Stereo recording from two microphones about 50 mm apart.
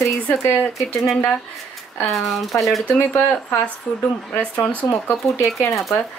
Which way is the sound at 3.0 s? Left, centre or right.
Left.